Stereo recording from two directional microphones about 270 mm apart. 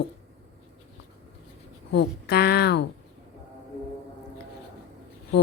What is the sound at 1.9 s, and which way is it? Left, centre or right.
Speech, left.